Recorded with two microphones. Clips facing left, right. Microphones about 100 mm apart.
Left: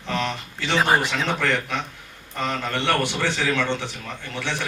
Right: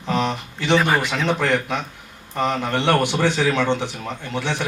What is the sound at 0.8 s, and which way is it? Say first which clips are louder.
Speech: even; 20° left (ahead or behind).